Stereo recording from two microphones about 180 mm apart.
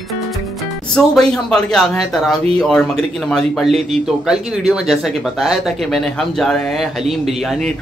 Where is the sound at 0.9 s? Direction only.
5° left (ahead or behind).